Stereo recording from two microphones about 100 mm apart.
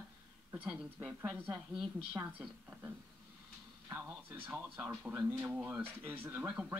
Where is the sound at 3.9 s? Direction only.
20° right (ahead or behind).